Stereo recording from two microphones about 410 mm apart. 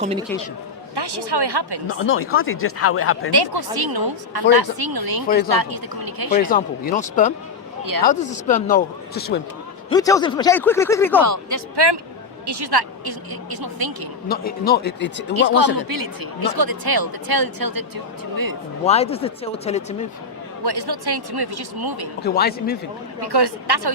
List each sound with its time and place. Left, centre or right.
0.0 s speech: centre
0.9 s speech: right
1.9 s speech: left
3.3 s speech: right
6.4 s speech: centre
9.9 s speech: centre
11.2 s a man's voice: right
12.5 s speech: right
14.3 s speech: left
15.3 s a man's voice: right
18.9 s speech: centre
20.7 s speech: right
22.2 s speech: left
23.2 s speech: right